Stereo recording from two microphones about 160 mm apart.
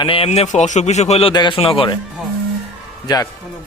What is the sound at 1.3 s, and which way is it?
Speech, 30° left (ahead or behind).